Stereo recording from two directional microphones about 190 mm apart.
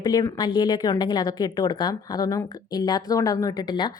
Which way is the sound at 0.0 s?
20° left (ahead or behind).